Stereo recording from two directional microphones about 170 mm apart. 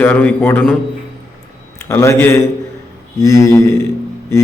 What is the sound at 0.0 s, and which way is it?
Mantra, 10° left (ahead or behind).